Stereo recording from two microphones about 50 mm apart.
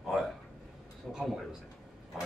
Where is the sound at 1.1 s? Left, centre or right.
Centre.